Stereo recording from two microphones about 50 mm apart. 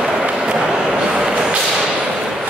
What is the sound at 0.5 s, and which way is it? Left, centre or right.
Whip, centre.